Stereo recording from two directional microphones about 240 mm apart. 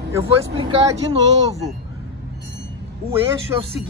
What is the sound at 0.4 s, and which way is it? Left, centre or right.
Speech, right.